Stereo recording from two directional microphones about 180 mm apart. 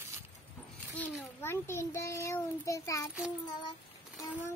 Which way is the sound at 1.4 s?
15° left (ahead or behind).